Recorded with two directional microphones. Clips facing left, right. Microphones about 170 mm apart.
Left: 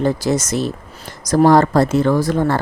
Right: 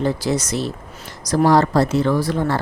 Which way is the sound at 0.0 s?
45° left (ahead or behind).